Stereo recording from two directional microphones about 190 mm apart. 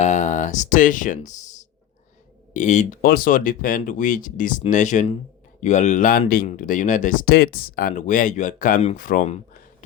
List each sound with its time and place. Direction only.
0.0 s speech: 40° left (ahead or behind)